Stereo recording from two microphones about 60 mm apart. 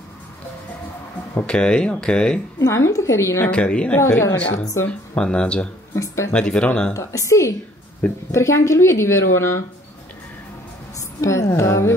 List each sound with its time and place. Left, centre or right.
1.3 s speech: centre
2.6 s a woman's voice: left
3.5 s a woman's voice: centre
4.2 s a woman's voice: left
5.1 s speech: centre
6.9 s a woman's voice: left
11.1 s a woman's voice: left